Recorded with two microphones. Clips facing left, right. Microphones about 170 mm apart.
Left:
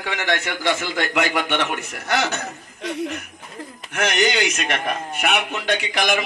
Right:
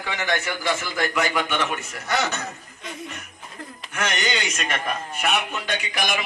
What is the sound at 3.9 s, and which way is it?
A man's voice, 70° left (ahead or behind).